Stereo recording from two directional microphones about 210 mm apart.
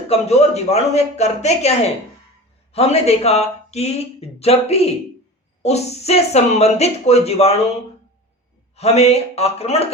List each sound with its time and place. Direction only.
0.1 s speech: 30° left (ahead or behind)
2.7 s speech: 30° left (ahead or behind)
8.7 s speech: 30° left (ahead or behind)